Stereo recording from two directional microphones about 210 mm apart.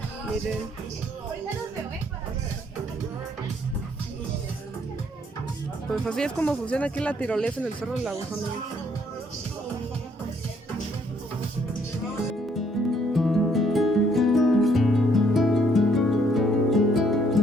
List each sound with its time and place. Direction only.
5.9 s speech: 5° left (ahead or behind)
12.8 s music: centre (ahead or behind)